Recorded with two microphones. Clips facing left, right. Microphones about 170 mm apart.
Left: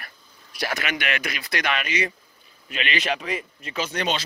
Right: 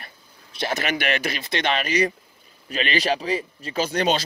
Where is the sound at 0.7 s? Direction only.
35° right (ahead or behind).